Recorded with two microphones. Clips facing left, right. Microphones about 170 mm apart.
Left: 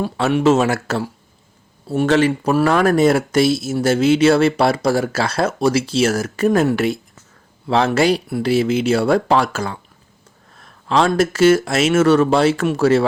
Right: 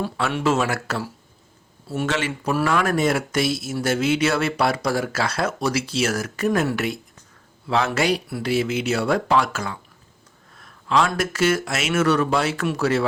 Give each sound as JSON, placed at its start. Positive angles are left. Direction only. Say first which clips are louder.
{"t": 0.0, "sound": "speech", "louder": "left 7 dB", "side_deg": 20}
{"t": 10.8, "sound": "speech", "louder": "left 5 dB", "side_deg": 30}